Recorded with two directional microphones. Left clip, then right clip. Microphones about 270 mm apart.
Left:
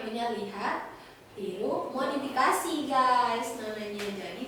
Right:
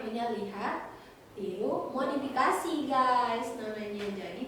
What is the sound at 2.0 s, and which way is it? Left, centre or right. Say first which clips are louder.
Child singing: left 2 dB; centre.